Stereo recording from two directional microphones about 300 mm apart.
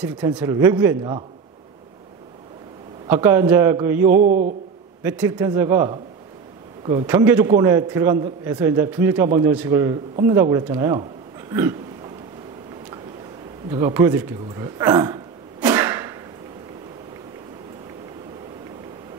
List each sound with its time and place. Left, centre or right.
0.0 s a man's voice: centre
3.1 s a man's voice: centre
4.1 s mantra: right
5.0 s a man's voice: centre
11.5 s a sound: centre
13.7 s a sound: centre